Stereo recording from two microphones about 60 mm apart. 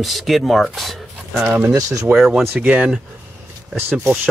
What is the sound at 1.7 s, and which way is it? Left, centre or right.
Speech, right.